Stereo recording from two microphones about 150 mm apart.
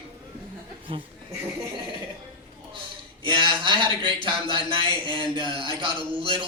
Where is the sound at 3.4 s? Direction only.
35° right (ahead or behind).